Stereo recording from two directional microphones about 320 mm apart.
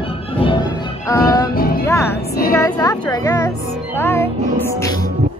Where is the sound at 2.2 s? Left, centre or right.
Left.